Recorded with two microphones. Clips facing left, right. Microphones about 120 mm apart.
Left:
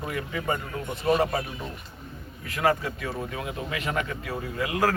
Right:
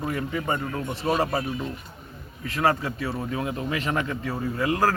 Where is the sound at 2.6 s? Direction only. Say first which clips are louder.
Right 1 dB; 35° right (ahead or behind).